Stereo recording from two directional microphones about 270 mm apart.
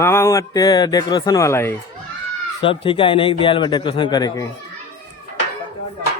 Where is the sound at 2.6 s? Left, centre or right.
Centre.